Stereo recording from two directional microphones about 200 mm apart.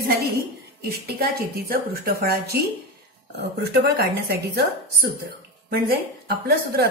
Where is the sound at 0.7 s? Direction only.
50° right (ahead or behind).